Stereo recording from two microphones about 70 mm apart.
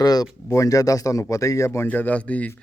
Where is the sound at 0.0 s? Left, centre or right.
Left.